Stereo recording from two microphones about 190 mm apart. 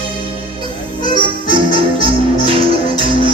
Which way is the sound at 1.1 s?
25° right (ahead or behind).